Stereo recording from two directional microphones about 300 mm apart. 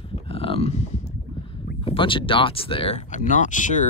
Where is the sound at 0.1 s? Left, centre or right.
Centre.